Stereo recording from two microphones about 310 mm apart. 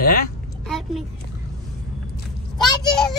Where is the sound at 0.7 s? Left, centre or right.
Centre.